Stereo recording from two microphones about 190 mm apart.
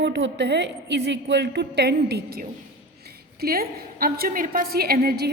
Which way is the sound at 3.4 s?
50° right (ahead or behind).